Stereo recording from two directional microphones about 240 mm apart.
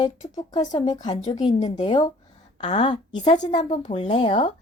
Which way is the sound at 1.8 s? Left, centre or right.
Centre.